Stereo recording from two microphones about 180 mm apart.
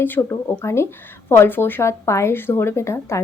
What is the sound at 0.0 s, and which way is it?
A woman's voice, 15° left (ahead or behind).